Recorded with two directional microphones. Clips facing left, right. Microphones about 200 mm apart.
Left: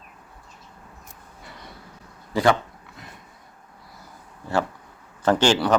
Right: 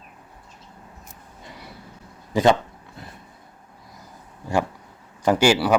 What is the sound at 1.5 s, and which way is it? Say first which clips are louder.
Vehicle: right 2 dB; 10° right (ahead or behind).